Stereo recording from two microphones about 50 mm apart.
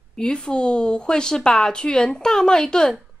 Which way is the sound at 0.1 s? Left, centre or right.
Centre.